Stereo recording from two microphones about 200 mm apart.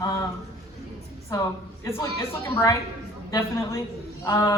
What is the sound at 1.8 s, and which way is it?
A man's voice, 15° left (ahead or behind).